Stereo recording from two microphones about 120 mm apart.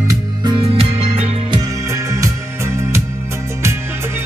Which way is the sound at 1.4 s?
30° right (ahead or behind).